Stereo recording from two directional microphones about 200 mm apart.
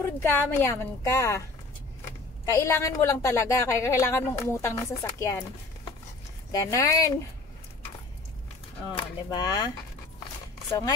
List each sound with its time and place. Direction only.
0.0 s a woman's voice: 10° left (ahead or behind)
2.4 s a woman's voice: 15° left (ahead or behind)
6.5 s a woman's voice: 15° left (ahead or behind)
9.3 s speech: 20° left (ahead or behind)